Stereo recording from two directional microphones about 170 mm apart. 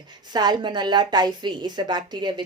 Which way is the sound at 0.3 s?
25° right (ahead or behind).